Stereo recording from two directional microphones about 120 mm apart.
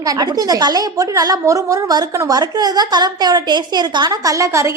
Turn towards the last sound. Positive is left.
turn(degrees=-25)  # may be behind; listen again after turning